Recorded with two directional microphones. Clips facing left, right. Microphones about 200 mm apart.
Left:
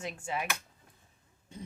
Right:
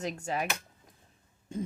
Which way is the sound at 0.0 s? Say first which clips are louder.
Right 3 dB; 40° right (ahead or behind).